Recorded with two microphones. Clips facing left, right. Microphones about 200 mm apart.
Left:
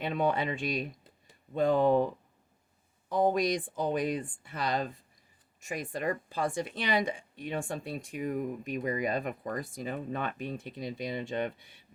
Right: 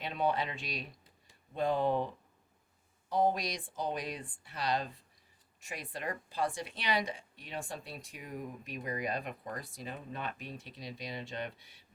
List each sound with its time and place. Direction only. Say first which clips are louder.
0.0 s speech: left 4 dB; 50° left (ahead or behind)
3.1 s speech: left 4 dB; 50° left (ahead or behind)